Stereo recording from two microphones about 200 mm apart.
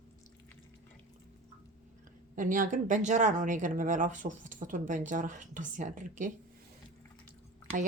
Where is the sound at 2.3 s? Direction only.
40° right (ahead or behind).